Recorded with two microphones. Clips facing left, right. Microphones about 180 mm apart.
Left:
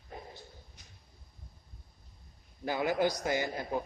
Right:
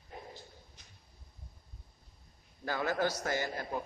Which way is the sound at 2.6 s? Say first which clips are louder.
Left 3 dB; 15° left (ahead or behind).